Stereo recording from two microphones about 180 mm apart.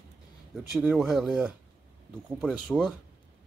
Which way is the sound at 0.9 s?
Centre (ahead or behind).